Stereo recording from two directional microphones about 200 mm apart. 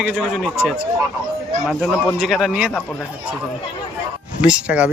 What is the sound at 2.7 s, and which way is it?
Speech, 10° left (ahead or behind).